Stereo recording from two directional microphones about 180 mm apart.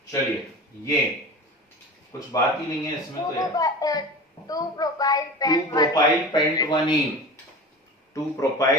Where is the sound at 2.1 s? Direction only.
20° left (ahead or behind).